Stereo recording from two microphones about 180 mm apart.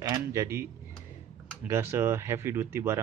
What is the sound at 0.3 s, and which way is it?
Speech, 15° right (ahead or behind).